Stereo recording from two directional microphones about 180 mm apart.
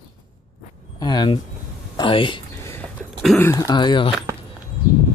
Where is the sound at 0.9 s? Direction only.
25° left (ahead or behind).